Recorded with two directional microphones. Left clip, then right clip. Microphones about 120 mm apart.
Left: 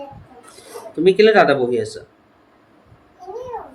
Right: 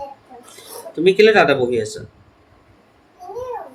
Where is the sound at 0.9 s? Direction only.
15° left (ahead or behind).